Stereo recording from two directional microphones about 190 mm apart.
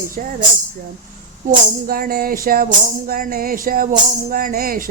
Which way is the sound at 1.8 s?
50° right (ahead or behind).